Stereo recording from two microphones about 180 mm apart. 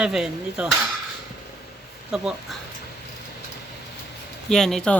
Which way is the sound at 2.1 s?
Centre (ahead or behind).